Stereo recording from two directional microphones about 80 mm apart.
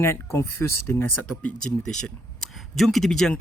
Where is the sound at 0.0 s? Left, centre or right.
Left.